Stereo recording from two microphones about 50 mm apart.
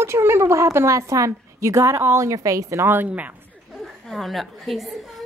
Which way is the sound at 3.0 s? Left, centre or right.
Right.